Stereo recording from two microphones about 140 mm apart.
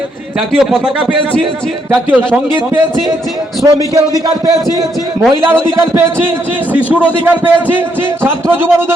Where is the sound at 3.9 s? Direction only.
25° right (ahead or behind).